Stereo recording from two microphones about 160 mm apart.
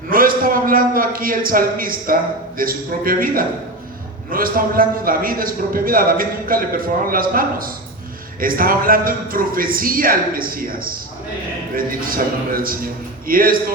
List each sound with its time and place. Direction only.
0.1 s a man's voice: 65° right (ahead or behind)